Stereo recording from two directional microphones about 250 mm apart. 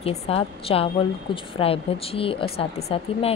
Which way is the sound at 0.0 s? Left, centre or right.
Left.